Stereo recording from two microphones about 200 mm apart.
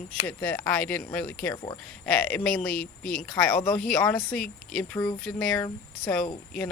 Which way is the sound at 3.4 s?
5° left (ahead or behind).